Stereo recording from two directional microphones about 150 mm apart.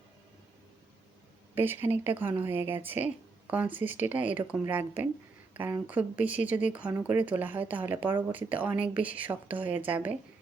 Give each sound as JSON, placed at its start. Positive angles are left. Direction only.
{"t": 1.5, "sound": "speech", "side_deg": -15}